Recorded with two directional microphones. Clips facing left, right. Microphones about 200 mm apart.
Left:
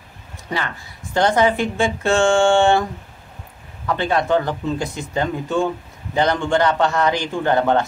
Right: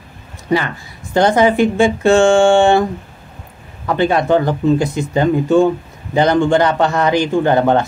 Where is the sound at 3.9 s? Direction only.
15° right (ahead or behind).